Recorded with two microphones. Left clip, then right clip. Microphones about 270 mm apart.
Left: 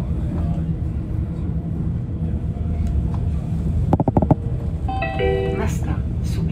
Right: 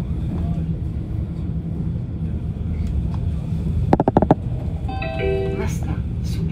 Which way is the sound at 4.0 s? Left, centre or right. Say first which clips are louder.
Right 3 dB; left.